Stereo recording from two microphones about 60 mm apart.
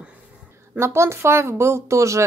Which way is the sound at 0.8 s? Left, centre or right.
Right.